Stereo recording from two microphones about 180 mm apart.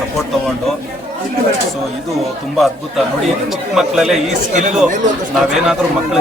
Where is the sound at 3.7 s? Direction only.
Centre (ahead or behind).